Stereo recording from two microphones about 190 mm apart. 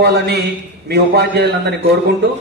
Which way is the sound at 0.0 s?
60° right (ahead or behind).